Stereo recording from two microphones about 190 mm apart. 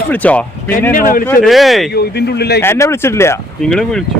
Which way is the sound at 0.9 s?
45° left (ahead or behind).